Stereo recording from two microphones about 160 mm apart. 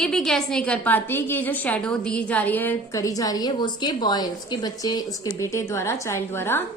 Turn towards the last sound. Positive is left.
turn(degrees=15)  # may be behind; listen again after turning